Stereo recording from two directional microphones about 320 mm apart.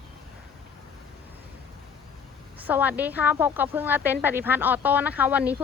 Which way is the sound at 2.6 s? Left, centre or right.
Centre.